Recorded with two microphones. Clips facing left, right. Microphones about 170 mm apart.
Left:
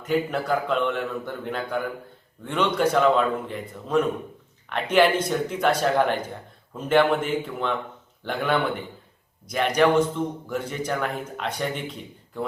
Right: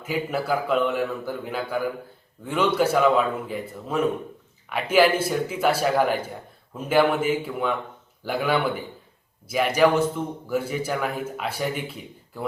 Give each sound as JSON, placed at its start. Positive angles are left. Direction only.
{"t": 0.0, "sound": "a man's voice", "side_deg": -5}